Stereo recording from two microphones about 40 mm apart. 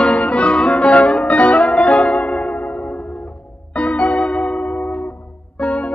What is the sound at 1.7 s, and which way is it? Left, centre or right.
Music, left.